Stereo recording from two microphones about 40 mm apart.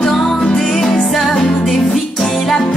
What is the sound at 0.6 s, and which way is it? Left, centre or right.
Music, centre.